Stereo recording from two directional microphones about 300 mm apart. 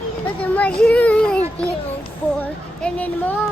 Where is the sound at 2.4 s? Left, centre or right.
Centre.